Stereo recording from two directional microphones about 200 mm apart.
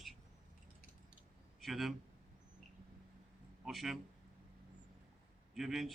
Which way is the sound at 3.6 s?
Centre (ahead or behind).